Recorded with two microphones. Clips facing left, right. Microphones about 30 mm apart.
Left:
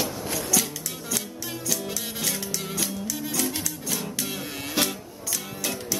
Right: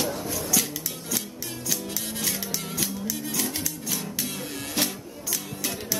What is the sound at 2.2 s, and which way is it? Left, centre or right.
Music, centre.